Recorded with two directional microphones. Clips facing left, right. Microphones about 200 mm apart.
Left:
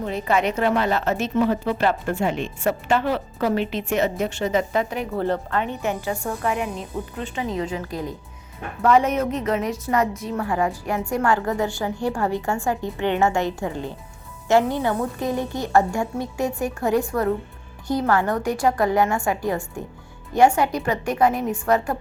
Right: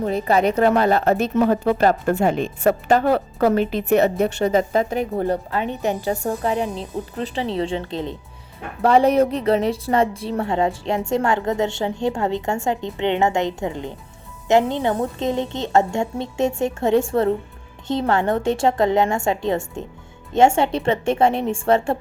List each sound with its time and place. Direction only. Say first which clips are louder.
0.0 s a woman's voice: right 4 dB; 40° right (ahead or behind)
4.4 s a woman's voice: right 2 dB; 35° right (ahead or behind)
5.1 s speech: left 3 dB; 15° right (ahead or behind)
5.8 s a woman's voice: right 3 dB; 35° right (ahead or behind)